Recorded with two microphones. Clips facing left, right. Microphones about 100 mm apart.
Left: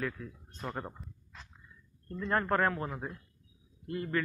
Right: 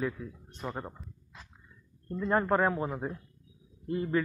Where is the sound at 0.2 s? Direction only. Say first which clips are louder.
Right 3 dB; 15° right (ahead or behind).